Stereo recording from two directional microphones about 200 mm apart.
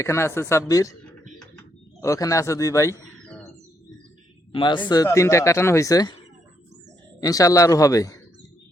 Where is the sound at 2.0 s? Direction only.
15° left (ahead or behind).